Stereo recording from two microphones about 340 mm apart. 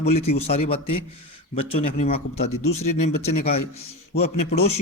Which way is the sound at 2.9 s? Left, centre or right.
Left.